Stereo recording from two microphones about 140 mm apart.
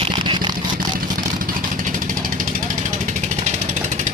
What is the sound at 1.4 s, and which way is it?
Vehicle, 70° right (ahead or behind).